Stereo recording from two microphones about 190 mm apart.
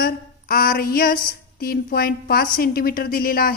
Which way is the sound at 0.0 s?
50° left (ahead or behind).